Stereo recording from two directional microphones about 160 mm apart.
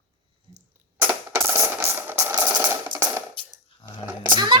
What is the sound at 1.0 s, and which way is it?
Music, 15° right (ahead or behind).